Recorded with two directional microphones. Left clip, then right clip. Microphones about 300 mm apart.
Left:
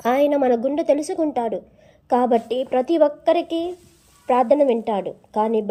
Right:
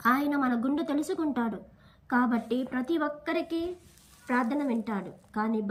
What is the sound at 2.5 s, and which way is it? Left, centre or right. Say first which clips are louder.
Speech: left 11 dB; right.